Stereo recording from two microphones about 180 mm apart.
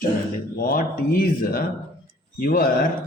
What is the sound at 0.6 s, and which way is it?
Speech, 55° left (ahead or behind).